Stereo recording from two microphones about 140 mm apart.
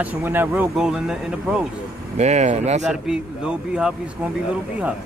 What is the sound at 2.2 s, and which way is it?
Speech, 55° right (ahead or behind).